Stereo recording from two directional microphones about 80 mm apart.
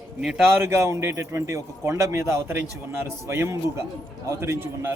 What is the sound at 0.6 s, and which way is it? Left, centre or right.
A man's voice, right.